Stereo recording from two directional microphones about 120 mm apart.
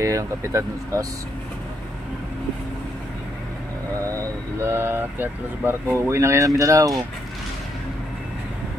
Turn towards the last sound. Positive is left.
turn(degrees=-30)  # may be behind; listen again after turning